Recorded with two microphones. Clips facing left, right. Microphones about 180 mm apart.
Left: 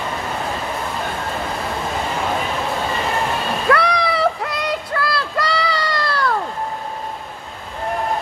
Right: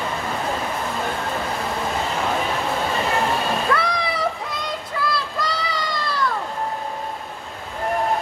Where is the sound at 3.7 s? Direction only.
70° left (ahead or behind).